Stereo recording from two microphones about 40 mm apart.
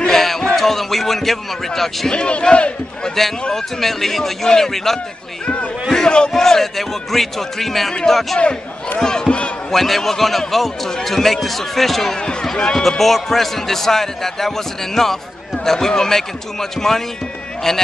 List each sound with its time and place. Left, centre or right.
0.0 s a sound: centre
0.6 s speech: centre
2.0 s a man's voice: left
3.5 s a man's voice: centre
6.0 s a man's voice: left
6.3 s a man's voice: centre
8.9 s a man's voice: centre
9.7 s speech: centre
12.2 s a man's voice: left
12.7 s a man's voice: centre